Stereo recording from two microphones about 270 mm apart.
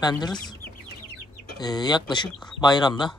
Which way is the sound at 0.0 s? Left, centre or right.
Centre.